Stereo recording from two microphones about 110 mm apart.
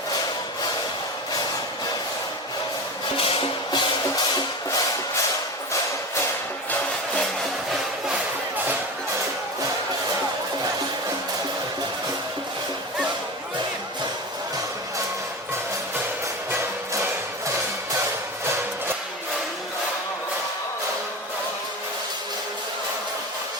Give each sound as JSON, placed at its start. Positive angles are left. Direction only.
{"t": 3.2, "sound": "music", "side_deg": 50}